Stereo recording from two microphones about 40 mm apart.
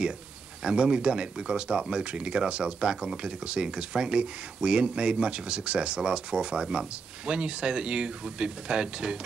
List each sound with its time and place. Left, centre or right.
0.7 s speech: right